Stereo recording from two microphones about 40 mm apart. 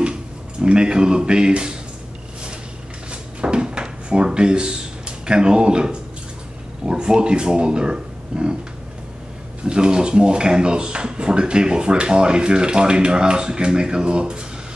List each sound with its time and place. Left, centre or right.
0.0 s speech: right
3.1 s drawer open or close: right
6.9 s speech: centre
9.6 s speech: right